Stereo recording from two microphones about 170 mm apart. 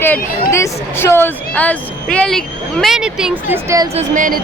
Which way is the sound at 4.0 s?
50° right (ahead or behind).